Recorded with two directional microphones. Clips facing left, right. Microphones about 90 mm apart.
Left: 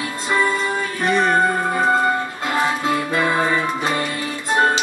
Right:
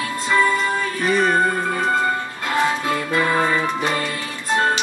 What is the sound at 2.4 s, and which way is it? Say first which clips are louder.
Music: right 2 dB; 20° left (ahead or behind).